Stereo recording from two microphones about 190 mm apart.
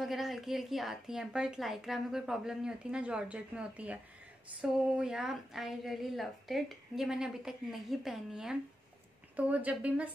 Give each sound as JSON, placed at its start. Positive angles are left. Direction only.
{"t": 0.0, "sound": "a woman's voice", "side_deg": 0}